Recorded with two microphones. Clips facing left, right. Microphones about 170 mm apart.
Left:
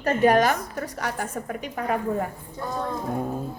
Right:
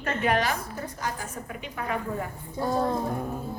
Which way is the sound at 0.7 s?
75° left (ahead or behind).